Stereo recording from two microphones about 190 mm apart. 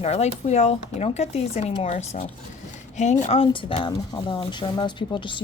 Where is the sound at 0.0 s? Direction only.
35° left (ahead or behind).